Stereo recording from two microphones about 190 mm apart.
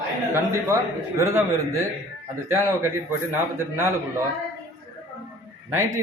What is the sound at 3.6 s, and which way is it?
Speech, 15° right (ahead or behind).